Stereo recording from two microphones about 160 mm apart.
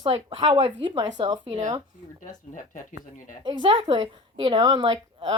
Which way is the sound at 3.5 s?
30° right (ahead or behind).